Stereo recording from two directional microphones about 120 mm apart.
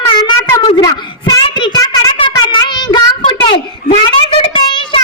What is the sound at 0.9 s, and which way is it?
Child singing, 40° left (ahead or behind).